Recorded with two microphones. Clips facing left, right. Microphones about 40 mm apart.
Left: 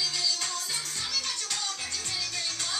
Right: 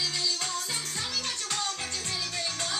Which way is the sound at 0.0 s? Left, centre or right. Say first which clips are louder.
Even; centre.